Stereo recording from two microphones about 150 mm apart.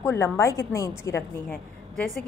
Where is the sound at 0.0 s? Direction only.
20° left (ahead or behind).